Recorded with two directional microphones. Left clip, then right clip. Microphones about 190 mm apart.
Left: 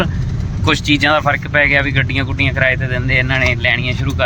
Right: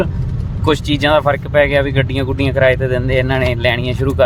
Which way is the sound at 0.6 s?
20° right (ahead or behind).